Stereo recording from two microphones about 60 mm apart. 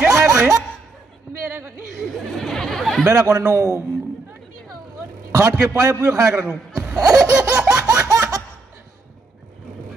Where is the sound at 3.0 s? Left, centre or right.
Right.